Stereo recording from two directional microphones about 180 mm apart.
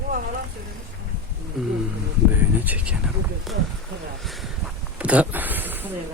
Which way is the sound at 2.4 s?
10° right (ahead or behind).